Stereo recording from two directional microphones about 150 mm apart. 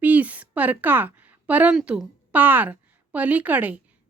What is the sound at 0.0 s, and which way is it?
Speech, 10° right (ahead or behind).